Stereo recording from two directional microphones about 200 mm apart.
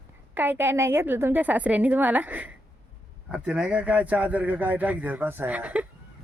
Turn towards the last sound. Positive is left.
turn(degrees=-5)  # may be behind; listen again after turning